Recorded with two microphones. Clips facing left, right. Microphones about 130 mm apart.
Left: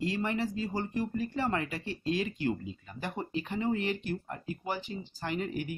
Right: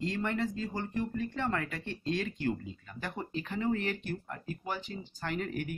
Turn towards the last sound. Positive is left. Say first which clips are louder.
# left 1 dB
turn(degrees=5)  # may be behind; listen again after turning